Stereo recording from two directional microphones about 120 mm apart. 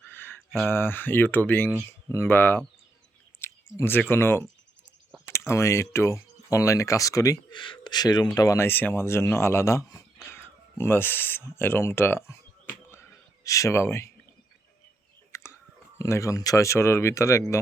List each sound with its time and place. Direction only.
0.1 s a sound: 20° left (ahead or behind)
0.7 s speech: 20° left (ahead or behind)
7.5 s speech: 40° left (ahead or behind)
8.4 s speech: 25° left (ahead or behind)
10.2 s a sound: 20° left (ahead or behind)
16.0 s speech: 25° left (ahead or behind)